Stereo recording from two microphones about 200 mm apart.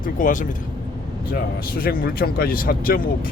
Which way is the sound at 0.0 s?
40° left (ahead or behind).